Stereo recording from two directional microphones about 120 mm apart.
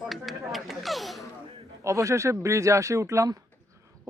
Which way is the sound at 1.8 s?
25° right (ahead or behind).